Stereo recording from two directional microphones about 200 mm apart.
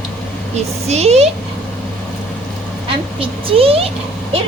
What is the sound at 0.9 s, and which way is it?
Speech, 30° right (ahead or behind).